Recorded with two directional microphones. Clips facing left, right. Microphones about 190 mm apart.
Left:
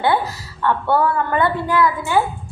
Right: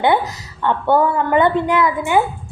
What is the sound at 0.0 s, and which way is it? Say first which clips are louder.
A woman's voice: right 2 dB; 20° right (ahead or behind).